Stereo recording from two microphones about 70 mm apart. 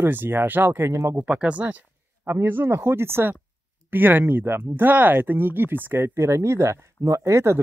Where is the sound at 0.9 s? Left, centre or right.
Right.